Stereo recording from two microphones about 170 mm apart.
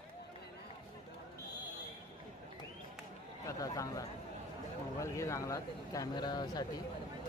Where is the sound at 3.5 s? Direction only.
20° left (ahead or behind).